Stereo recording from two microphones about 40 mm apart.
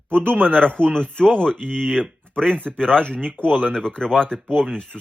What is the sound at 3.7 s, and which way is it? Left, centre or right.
Speech, centre.